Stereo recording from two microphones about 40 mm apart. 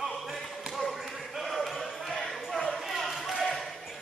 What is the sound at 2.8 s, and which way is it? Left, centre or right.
Basketball bounce, centre.